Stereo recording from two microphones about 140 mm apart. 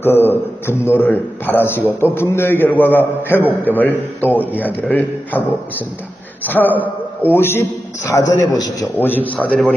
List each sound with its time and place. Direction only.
0.0 s a man's voice: 15° left (ahead or behind)
6.7 s a man's voice: 10° right (ahead or behind)
7.3 s a man's voice: 15° left (ahead or behind)
9.0 s a man's voice: 15° left (ahead or behind)